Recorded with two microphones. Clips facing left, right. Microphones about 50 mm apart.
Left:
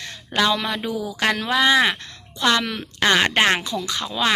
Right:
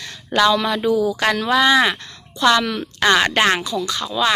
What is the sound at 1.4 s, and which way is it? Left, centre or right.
Speech, centre.